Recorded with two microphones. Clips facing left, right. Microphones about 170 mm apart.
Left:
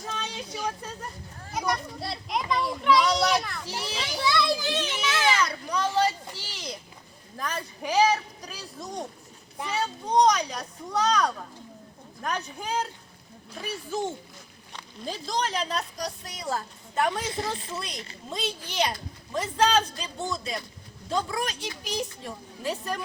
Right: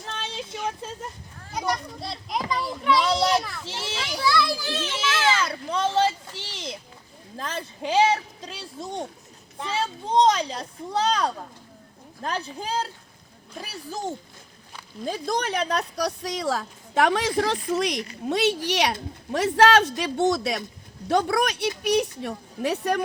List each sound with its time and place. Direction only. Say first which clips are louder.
0.2 s a sound: right 4 dB; 25° right (ahead or behind)
1.5 s a child's voice: right 1 dB; centre (ahead or behind)
3.0 s speech: right 1 dB; 25° right (ahead or behind)
3.3 s a child's voice: right 3 dB; 5° right (ahead or behind)
3.6 s speech: even; 25° right (ahead or behind)
4.2 s a child's voice: right 1 dB; 20° left (ahead or behind)
5.4 s a child's voice: right 2 dB; 25° right (ahead or behind)
15.0 s a woman's voice: right 3 dB; 55° right (ahead or behind)